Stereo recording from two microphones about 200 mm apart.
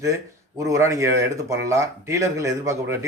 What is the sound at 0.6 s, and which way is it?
A man's voice, 15° right (ahead or behind).